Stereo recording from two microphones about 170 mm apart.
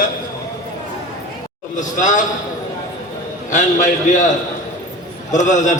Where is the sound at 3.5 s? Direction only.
50° left (ahead or behind).